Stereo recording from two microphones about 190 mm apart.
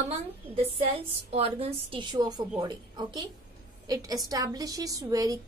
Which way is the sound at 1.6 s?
30° right (ahead or behind).